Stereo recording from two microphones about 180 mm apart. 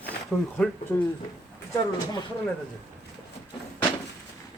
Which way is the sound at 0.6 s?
Centre (ahead or behind).